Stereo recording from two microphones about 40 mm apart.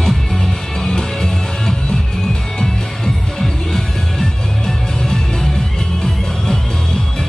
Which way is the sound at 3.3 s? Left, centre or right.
Centre.